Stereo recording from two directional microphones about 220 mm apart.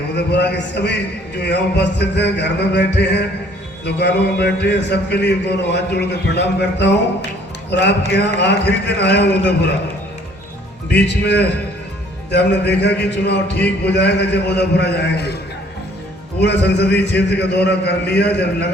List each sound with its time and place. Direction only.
0.1 s a man's voice: 50° left (ahead or behind)
10.9 s a man's voice: 50° left (ahead or behind)
16.4 s a man's voice: 50° left (ahead or behind)